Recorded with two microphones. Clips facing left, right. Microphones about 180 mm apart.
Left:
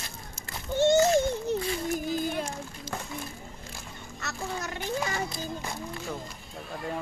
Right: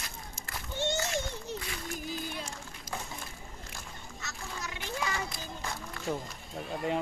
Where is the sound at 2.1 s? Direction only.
50° left (ahead or behind).